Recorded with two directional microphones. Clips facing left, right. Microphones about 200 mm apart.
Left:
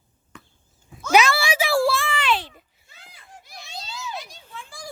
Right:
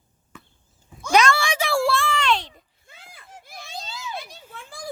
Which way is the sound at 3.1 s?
50° right (ahead or behind).